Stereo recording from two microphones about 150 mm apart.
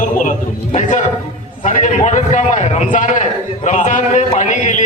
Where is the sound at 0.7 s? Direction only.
55° left (ahead or behind).